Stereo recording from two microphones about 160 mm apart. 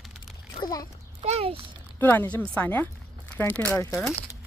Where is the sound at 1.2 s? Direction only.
40° right (ahead or behind).